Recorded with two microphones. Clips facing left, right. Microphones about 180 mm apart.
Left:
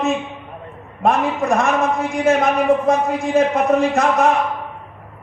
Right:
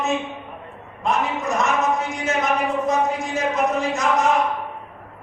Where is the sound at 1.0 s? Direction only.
55° left (ahead or behind).